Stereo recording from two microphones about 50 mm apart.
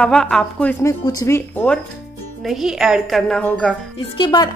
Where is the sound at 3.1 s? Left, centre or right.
Centre.